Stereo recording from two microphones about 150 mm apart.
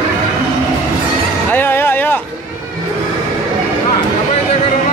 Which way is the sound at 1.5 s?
15° left (ahead or behind).